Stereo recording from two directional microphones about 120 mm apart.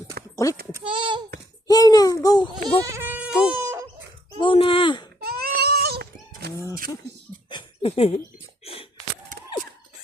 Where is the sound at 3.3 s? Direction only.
5° right (ahead or behind).